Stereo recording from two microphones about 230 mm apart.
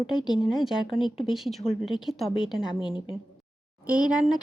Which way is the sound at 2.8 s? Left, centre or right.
Left.